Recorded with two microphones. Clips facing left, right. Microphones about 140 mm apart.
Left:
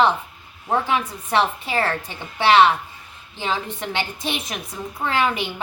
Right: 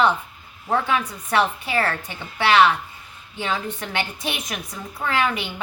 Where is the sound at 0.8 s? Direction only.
25° left (ahead or behind).